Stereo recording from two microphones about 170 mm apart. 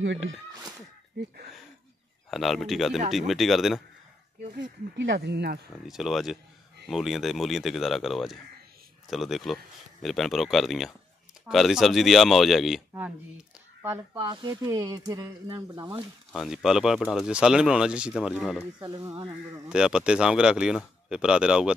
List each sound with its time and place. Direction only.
1.1 s speech: 90° right
2.3 s speech: centre (ahead or behind)
4.6 s speech: 90° right; by 5.6 s 75° right (ahead or behind)
5.9 s speech: centre (ahead or behind)
14.1 s speech: 30° right (ahead or behind)
16.3 s speech: centre (ahead or behind)
18.8 s speech: 25° right (ahead or behind)
19.7 s speech: 5° right (ahead or behind)